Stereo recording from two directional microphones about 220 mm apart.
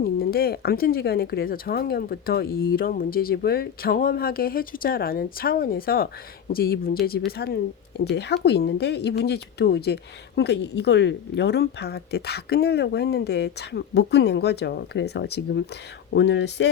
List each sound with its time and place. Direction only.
0.0 s speech: 45° left (ahead or behind)